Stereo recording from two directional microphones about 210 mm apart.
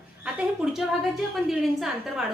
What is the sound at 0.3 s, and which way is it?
A woman's voice, 5° right (ahead or behind).